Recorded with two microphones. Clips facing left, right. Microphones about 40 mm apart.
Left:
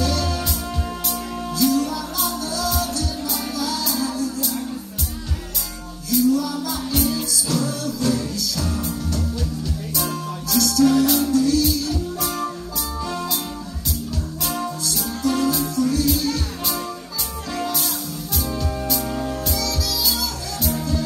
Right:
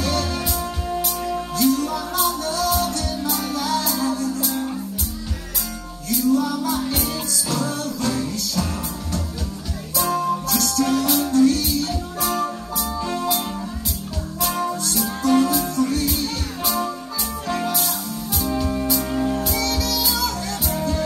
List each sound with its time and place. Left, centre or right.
0.0 s music: right
0.8 s music: centre
1.5 s music: right
6.0 s music: right
11.6 s music: right
13.0 s music: right
14.4 s music: right
17.7 s music: centre
19.5 s music: right